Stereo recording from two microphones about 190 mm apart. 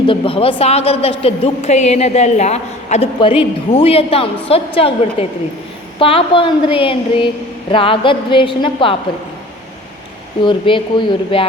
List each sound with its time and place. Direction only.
0.1 s a woman's voice: 30° left (ahead or behind)
10.4 s a woman's voice: 25° left (ahead or behind)